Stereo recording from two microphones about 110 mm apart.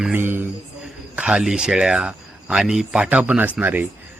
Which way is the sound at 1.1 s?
10° right (ahead or behind).